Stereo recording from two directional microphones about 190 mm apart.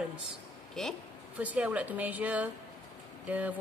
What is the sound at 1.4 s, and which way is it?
A woman's voice, 10° right (ahead or behind).